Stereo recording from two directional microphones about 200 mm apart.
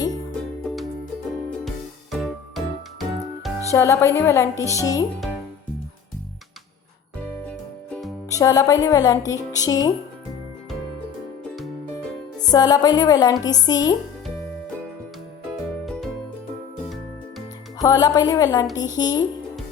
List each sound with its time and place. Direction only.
1.5 s music: centre (ahead or behind)
3.7 s speech: 15° left (ahead or behind)
7.4 s music: 5° left (ahead or behind)
8.3 s speech: 15° left (ahead or behind)
12.5 s speech: 20° left (ahead or behind)
15.9 s music: centre (ahead or behind)
17.7 s speech: 20° left (ahead or behind)